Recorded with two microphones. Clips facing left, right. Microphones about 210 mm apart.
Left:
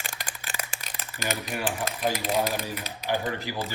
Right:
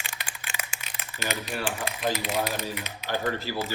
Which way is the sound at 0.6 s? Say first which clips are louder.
Left 2 dB; 35° left (ahead or behind).